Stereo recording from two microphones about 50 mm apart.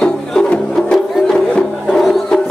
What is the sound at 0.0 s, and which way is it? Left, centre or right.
Music, centre.